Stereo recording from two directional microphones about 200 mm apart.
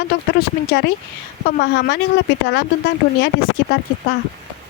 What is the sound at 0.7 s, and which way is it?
Speech, 55° left (ahead or behind).